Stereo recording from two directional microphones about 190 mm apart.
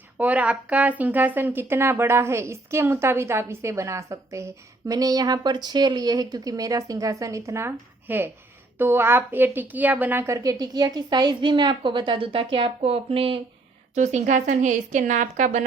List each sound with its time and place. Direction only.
0.2 s a woman's voice: 5° right (ahead or behind); by 15.6 s 40° right (ahead or behind)